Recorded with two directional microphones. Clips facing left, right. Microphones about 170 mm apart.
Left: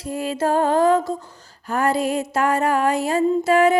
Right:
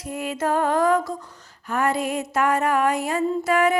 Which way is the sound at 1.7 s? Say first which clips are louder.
Left 3 dB; 35° left (ahead or behind).